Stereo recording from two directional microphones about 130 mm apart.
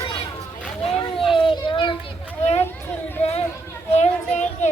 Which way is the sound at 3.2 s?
50° left (ahead or behind).